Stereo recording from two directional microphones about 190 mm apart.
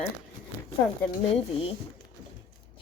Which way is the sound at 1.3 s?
30° left (ahead or behind).